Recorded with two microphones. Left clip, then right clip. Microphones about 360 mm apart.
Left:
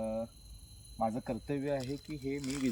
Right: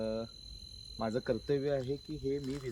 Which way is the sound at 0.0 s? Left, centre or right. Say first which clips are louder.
Even; centre.